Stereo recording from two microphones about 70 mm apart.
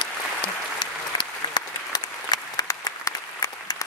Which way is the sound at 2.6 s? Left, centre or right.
Left.